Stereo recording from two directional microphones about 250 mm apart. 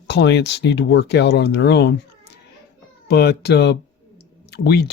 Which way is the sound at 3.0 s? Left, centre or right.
Left.